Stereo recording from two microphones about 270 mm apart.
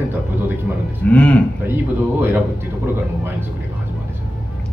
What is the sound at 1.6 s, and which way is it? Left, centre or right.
Speech, centre.